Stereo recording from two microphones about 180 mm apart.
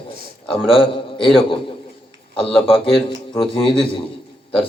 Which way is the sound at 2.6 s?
30° left (ahead or behind).